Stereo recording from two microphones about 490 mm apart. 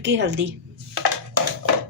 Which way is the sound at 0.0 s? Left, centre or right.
Right.